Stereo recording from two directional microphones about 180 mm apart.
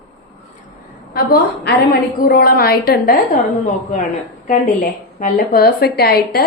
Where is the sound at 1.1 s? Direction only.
55° left (ahead or behind).